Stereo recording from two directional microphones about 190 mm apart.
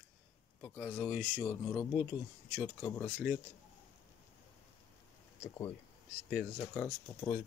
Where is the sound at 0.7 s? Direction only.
Centre (ahead or behind).